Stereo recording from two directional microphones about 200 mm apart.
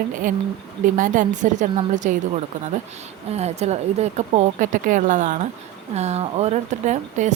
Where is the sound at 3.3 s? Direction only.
35° right (ahead or behind).